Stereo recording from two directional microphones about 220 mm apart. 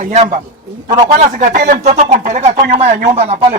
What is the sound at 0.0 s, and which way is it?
Speech, 35° right (ahead or behind).